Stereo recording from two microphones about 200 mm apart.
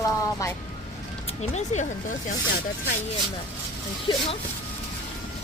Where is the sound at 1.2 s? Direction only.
35° left (ahead or behind).